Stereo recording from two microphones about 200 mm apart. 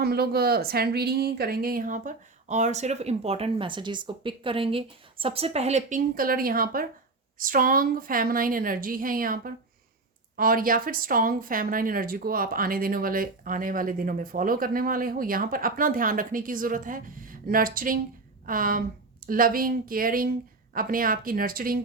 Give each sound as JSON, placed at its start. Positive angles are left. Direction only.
{"t": 0.0, "sound": "speech", "side_deg": -50}